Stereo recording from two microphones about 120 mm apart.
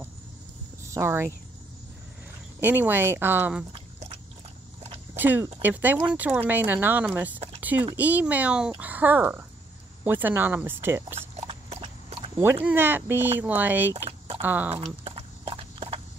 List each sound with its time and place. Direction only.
0.8 s speech: 25° right (ahead or behind)
2.6 s speech: 15° right (ahead or behind)
5.1 s speech: 15° right (ahead or behind)
11.1 s a sound: 55° right (ahead or behind)
12.6 s speech: 15° right (ahead or behind)
15.0 s clip-clop: 55° right (ahead or behind)